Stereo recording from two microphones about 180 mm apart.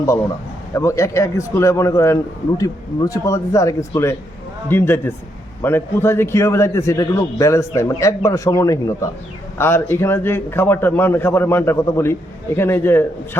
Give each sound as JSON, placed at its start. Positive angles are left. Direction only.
{"t": 0.7, "sound": "a man's voice", "side_deg": 15}